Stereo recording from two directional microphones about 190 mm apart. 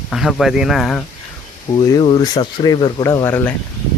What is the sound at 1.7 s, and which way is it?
Speech, 25° left (ahead or behind).